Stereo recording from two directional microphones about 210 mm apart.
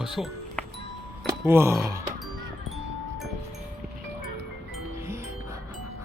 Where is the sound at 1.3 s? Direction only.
10° right (ahead or behind).